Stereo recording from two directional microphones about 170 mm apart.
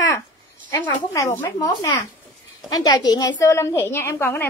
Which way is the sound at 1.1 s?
15° left (ahead or behind).